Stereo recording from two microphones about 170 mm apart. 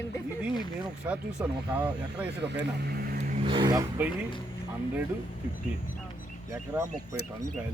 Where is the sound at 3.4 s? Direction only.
25° right (ahead or behind).